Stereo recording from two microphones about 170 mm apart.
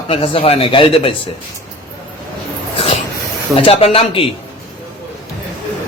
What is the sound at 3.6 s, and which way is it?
Speech, 35° left (ahead or behind).